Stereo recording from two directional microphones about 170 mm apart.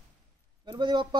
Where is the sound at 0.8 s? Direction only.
25° right (ahead or behind).